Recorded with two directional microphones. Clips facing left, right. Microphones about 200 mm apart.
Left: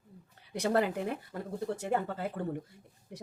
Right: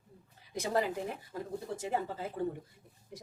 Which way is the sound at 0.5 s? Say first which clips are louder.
Left 3 dB; 65° left (ahead or behind).